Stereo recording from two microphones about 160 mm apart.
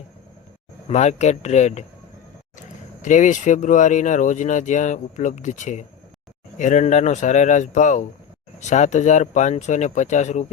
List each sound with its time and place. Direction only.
0.9 s speech: 45° left (ahead or behind)